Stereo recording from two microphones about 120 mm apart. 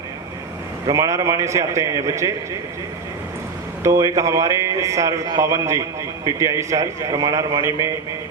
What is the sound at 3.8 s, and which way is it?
A man's voice, 25° right (ahead or behind).